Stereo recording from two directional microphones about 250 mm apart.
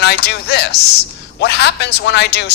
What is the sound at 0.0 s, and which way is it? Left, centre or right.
Speech, left.